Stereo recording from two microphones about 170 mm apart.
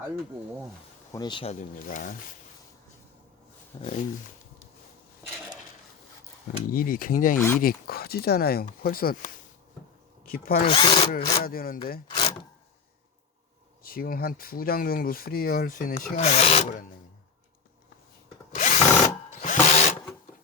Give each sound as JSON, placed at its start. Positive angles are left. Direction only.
{"t": 1.1, "sound": "speech", "side_deg": 25}
{"t": 1.5, "sound": "speech", "side_deg": 50}
{"t": 3.7, "sound": "speech", "side_deg": 25}
{"t": 6.7, "sound": "speech", "side_deg": 55}
{"t": 7.3, "sound": "speech", "side_deg": 10}
{"t": 7.6, "sound": "speech", "side_deg": 60}
{"t": 10.7, "sound": "speech", "side_deg": 30}
{"t": 11.1, "sound": "speech", "side_deg": 60}
{"t": 12.0, "sound": "a sound", "side_deg": 25}
{"t": 13.8, "sound": "speech", "side_deg": 60}
{"t": 16.1, "sound": "wood", "side_deg": 40}
{"t": 18.5, "sound": "drill", "side_deg": 45}